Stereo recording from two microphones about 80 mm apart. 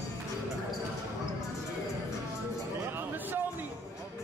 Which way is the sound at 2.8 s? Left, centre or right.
Right.